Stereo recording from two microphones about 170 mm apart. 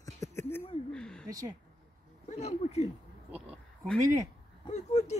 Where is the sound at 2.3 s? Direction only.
40° left (ahead or behind).